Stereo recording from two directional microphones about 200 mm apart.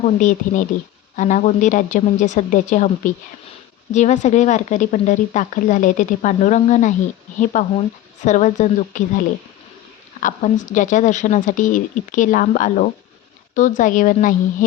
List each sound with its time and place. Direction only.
0.0 s speech: 40° left (ahead or behind)
10.2 s speech: 40° left (ahead or behind)